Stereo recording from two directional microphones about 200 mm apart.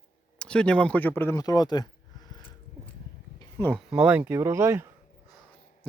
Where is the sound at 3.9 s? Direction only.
5° right (ahead or behind).